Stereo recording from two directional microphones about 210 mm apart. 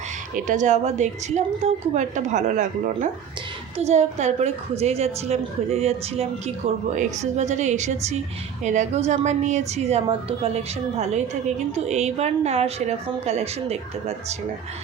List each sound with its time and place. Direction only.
0.3 s a woman's voice: 35° right (ahead or behind)